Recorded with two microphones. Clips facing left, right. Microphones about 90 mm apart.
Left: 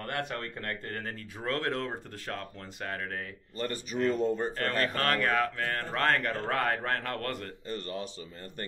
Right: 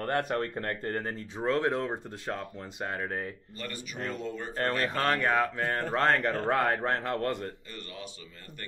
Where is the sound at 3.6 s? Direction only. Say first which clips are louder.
Left 8 dB; 40° left (ahead or behind).